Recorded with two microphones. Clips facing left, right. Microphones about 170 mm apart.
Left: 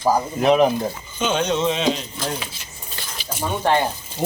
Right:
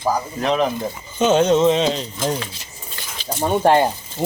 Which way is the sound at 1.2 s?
40° right (ahead or behind).